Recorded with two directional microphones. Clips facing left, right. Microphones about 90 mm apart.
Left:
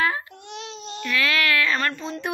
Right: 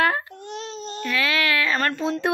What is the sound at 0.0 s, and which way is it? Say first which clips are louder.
Babbling: right 3 dB; 60° right (ahead or behind).